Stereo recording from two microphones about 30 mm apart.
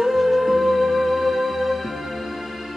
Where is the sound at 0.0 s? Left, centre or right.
Centre.